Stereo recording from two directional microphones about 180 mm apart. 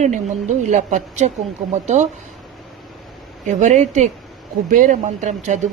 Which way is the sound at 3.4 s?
40° right (ahead or behind).